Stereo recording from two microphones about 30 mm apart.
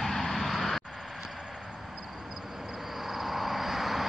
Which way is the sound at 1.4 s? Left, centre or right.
Centre.